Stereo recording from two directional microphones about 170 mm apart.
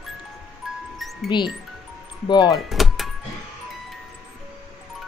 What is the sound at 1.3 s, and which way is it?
Speech, 25° left (ahead or behind).